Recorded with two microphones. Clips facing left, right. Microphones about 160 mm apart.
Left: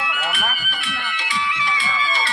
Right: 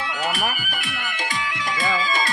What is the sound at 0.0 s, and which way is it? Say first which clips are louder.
Music: right 1 dB; 35° right (ahead or behind).